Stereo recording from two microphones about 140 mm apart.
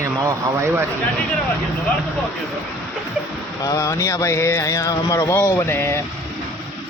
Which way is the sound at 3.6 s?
25° left (ahead or behind).